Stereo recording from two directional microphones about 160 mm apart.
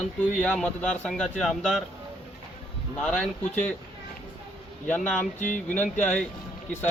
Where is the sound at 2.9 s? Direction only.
5° left (ahead or behind).